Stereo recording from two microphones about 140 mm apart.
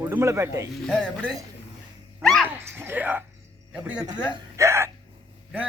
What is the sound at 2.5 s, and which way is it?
Speech, 15° right (ahead or behind).